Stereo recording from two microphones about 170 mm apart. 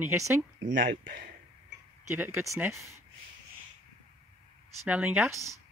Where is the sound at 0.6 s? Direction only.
55° right (ahead or behind).